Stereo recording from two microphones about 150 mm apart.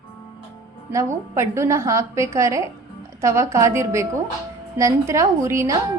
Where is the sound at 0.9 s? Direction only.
20° right (ahead or behind).